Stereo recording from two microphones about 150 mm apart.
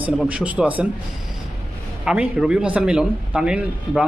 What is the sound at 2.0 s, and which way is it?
Speech, 5° right (ahead or behind).